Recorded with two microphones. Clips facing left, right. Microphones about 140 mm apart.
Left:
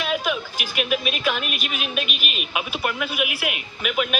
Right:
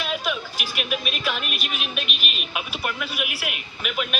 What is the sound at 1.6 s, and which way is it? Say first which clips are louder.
A man's voice: left 3 dB; centre (ahead or behind).